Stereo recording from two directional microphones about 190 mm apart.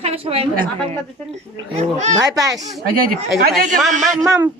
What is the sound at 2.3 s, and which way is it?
Speech, 20° right (ahead or behind).